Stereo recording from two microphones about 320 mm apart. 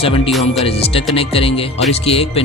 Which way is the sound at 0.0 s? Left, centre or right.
Centre.